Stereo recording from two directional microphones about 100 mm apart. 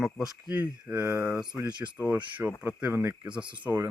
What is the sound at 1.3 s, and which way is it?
Speech, 5° right (ahead or behind).